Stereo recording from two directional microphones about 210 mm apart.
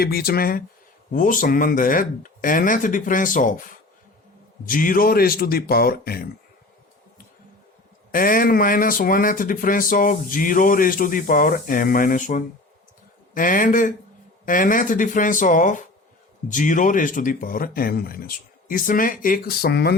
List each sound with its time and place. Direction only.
0.0 s a man's voice: 45° left (ahead or behind)
4.6 s a man's voice: 40° left (ahead or behind)
8.1 s speech: 40° left (ahead or behind)